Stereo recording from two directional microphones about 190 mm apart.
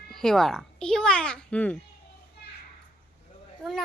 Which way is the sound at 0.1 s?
Centre (ahead or behind).